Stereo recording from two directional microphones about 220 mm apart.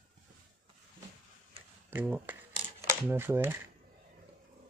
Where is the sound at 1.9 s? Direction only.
10° right (ahead or behind).